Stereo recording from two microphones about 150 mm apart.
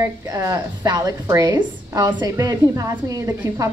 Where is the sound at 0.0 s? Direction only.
20° right (ahead or behind).